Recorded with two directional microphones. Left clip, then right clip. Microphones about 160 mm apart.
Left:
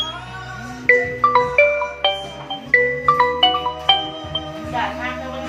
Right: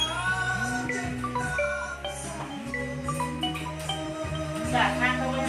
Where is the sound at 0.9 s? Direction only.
60° left (ahead or behind).